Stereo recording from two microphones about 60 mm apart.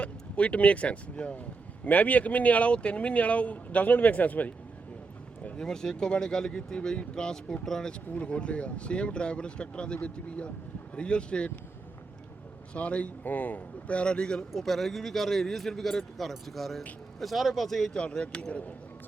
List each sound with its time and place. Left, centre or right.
0.0 s speech: left
5.4 s a sound: left
5.6 s speech: centre
12.7 s speech: left
14.5 s speech: centre
17.9 s speech: centre